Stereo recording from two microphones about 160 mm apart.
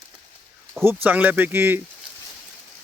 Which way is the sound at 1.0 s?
10° right (ahead or behind).